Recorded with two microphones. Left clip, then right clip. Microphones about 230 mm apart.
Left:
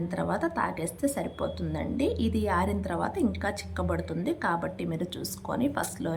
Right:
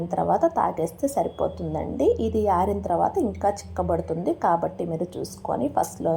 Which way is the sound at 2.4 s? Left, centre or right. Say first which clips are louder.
Right 6 dB; centre.